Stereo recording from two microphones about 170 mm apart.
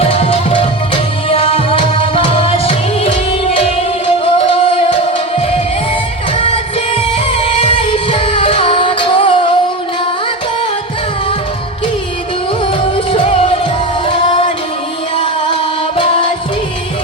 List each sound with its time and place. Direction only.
0.0 s music: 35° left (ahead or behind)
4.4 s music: 35° left (ahead or behind)
7.3 s music: 30° left (ahead or behind)
13.1 s music: 35° left (ahead or behind)